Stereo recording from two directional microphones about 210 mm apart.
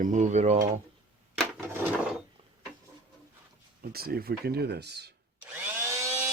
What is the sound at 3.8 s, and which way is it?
Speech, 45° right (ahead or behind).